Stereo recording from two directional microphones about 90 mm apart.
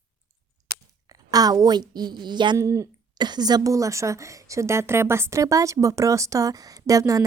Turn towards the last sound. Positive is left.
turn(degrees=-40)  # may be behind; listen again after turning